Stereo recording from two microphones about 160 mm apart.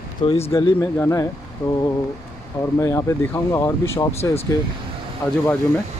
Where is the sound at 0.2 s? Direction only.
35° left (ahead or behind).